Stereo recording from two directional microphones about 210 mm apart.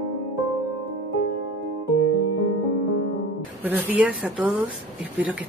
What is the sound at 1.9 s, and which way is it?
Music, 70° left (ahead or behind).